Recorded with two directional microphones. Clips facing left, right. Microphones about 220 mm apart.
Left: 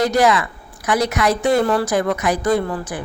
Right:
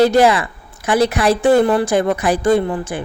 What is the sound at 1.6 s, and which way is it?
Speech, 20° right (ahead or behind).